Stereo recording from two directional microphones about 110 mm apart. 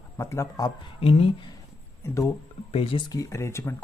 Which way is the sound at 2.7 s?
55° left (ahead or behind).